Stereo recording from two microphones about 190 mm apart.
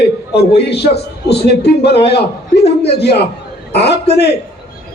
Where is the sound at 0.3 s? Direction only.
60° left (ahead or behind).